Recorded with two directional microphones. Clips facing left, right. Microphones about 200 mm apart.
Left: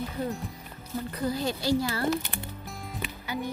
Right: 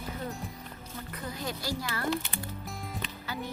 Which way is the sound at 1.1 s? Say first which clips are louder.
Left 7 dB; 35° left (ahead or behind).